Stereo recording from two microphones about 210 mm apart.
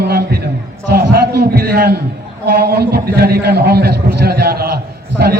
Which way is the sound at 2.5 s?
50° right (ahead or behind).